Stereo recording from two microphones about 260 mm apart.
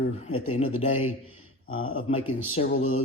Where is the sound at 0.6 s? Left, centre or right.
Left.